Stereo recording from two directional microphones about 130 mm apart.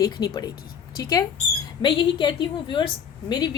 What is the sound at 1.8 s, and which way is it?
A woman's voice, 35° left (ahead or behind).